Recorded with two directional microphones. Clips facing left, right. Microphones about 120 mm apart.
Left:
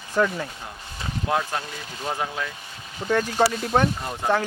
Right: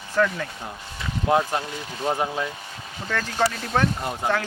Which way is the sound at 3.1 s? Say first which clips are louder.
Left 3 dB; 15° left (ahead or behind).